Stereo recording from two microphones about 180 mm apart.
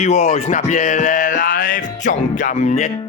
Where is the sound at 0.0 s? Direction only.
40° left (ahead or behind).